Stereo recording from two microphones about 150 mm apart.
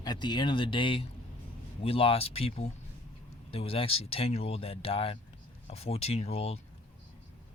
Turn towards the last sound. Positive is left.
turn(degrees=40)  # may be behind; listen again after turning